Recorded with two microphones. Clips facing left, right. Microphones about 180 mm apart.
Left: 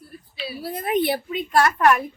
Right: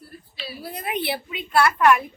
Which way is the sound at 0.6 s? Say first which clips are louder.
Left 6 dB; 40° left (ahead or behind).